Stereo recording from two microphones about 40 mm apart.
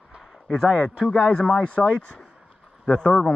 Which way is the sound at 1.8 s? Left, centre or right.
Centre.